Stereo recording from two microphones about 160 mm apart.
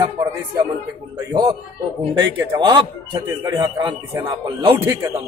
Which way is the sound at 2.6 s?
30° right (ahead or behind).